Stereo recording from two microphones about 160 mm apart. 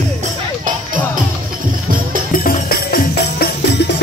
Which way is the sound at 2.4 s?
60° left (ahead or behind).